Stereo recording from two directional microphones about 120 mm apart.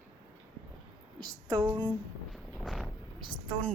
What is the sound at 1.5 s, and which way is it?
Speech, 40° right (ahead or behind).